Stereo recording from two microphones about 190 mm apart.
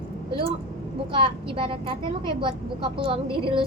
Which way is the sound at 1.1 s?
30° right (ahead or behind).